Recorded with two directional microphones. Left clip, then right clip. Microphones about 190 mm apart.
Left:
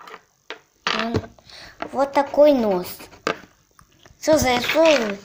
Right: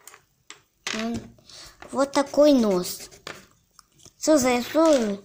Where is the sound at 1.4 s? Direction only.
40° right (ahead or behind).